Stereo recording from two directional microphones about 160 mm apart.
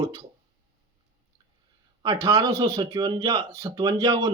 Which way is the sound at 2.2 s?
25° right (ahead or behind).